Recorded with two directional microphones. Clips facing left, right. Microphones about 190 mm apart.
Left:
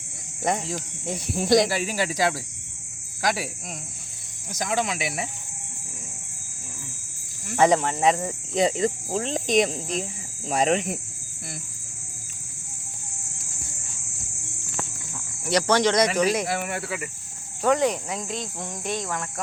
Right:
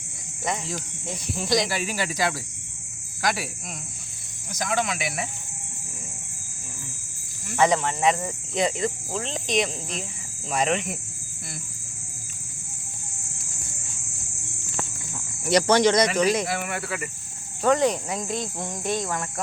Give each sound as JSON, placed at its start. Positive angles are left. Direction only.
{"t": 0.5, "sound": "speech", "side_deg": 55}
{"t": 1.7, "sound": "speech", "side_deg": 35}
{"t": 4.6, "sound": "speech", "side_deg": 30}
{"t": 7.5, "sound": "speech", "side_deg": 40}
{"t": 15.4, "sound": "speech", "side_deg": -15}
{"t": 16.0, "sound": "speech", "side_deg": 5}
{"t": 16.5, "sound": "speech", "side_deg": 30}
{"t": 17.6, "sound": "cricket", "side_deg": 10}